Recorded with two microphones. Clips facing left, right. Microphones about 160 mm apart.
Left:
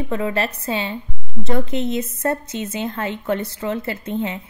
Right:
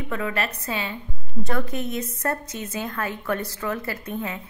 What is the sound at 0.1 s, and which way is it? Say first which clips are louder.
A woman's voice: left 4 dB; 30° left (ahead or behind).